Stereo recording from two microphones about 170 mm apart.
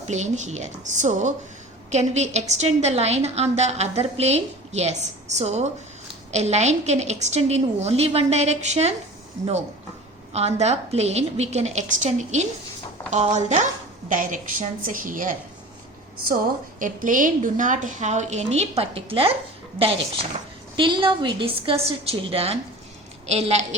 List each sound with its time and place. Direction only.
0.1 s a woman's voice: 45° right (ahead or behind)
10.3 s a woman's voice: 40° right (ahead or behind)
16.8 s a woman's voice: 50° right (ahead or behind); by 19.3 s 35° right (ahead or behind)
20.7 s a woman's voice: 30° right (ahead or behind)